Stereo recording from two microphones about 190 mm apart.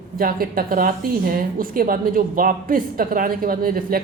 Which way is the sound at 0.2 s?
50° right (ahead or behind).